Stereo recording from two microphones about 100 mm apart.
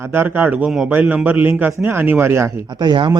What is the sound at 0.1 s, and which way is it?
A man's voice, 20° right (ahead or behind).